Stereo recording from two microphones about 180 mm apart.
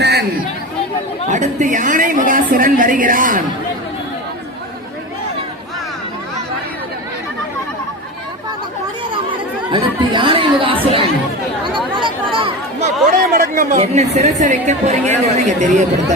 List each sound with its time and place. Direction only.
0.0 s chatter: 65° right (ahead or behind)
1.3 s a woman's voice: 45° right (ahead or behind)
9.7 s chatter: 25° right (ahead or behind)
11.9 s a sound: 25° right (ahead or behind)
13.1 s a woman's voice: 50° right (ahead or behind)